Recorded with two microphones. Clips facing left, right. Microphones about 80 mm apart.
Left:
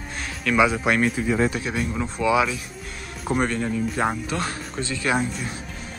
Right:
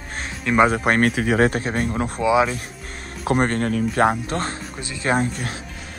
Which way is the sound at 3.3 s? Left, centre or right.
Right.